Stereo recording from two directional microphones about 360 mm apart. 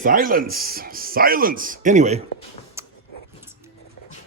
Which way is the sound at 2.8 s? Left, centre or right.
Centre.